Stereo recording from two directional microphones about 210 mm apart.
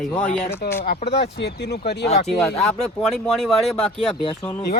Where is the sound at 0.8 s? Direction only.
50° left (ahead or behind).